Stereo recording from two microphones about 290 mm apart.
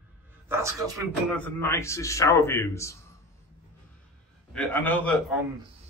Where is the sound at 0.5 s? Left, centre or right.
Centre.